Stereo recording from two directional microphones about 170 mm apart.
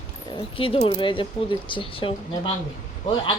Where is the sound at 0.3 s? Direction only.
30° left (ahead or behind).